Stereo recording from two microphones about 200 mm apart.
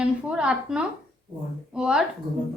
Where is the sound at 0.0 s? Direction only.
5° right (ahead or behind).